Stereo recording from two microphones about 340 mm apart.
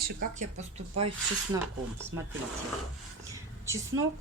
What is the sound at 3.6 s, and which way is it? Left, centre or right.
Speech, centre.